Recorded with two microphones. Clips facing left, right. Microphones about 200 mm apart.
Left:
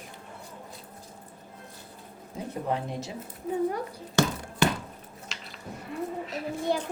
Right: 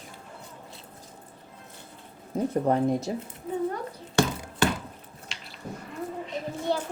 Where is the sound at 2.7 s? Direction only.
45° right (ahead or behind).